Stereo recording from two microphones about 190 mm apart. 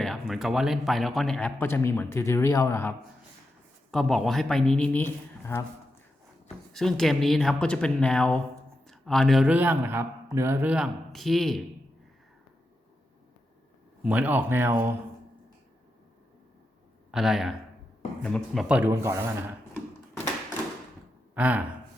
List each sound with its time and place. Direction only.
0.0 s speech: centre (ahead or behind)
3.9 s a man's voice: centre (ahead or behind)
6.7 s a man's voice: centre (ahead or behind)
14.0 s speech: 10° right (ahead or behind)
17.1 s a man's voice: centre (ahead or behind)
18.8 s speech: 15° right (ahead or behind)
21.3 s speech: 10° right (ahead or behind)